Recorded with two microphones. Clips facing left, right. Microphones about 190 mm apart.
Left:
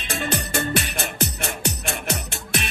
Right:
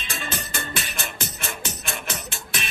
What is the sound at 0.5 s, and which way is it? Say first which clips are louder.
Music: left 7 dB; 40° left (ahead or behind).